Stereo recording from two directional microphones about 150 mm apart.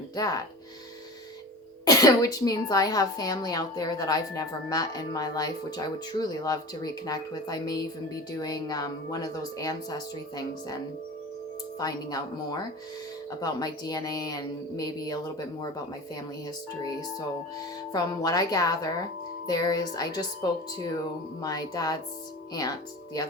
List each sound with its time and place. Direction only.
0.2 s speech: 25° left (ahead or behind)
1.8 s speech: 25° left (ahead or behind)
11.8 s speech: 25° left (ahead or behind)
16.8 s speech: 25° left (ahead or behind)